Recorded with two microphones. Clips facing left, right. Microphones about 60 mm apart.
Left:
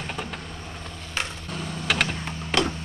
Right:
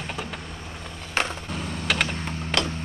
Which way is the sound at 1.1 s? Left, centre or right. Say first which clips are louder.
Right 5 dB; right.